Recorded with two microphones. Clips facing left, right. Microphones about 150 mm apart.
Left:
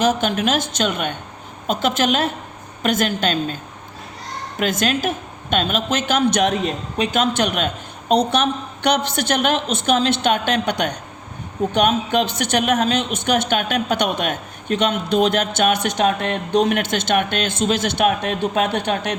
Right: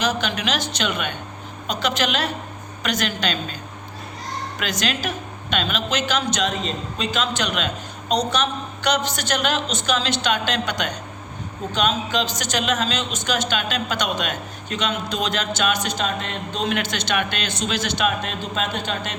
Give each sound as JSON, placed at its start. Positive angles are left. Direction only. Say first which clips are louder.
{"t": 0.0, "sound": "a woman's voice", "louder": "left 5 dB", "side_deg": 50}
{"t": 4.6, "sound": "a man's voice", "louder": "left 6 dB", "side_deg": 50}